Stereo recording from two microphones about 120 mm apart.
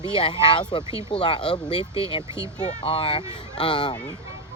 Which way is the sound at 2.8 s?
45° left (ahead or behind).